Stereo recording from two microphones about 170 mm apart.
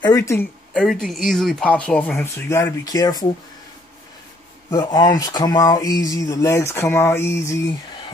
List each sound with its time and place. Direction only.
0.0 s speech: 20° left (ahead or behind)
0.7 s speech: centre (ahead or behind); by 3.3 s 20° left (ahead or behind)
4.6 s speech: 25° left (ahead or behind)